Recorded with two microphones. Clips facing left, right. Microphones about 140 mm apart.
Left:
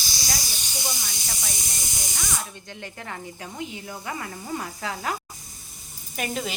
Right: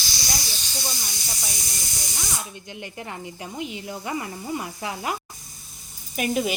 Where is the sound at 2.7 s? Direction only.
15° right (ahead or behind).